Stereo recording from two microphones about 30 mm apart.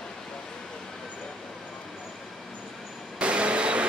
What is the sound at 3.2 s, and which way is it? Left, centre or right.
Vehicle, right.